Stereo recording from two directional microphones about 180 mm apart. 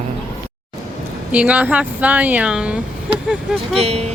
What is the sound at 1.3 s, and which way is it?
Speech, 5° right (ahead or behind).